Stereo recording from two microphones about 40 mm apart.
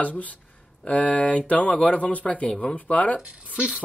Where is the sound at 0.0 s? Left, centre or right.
Left.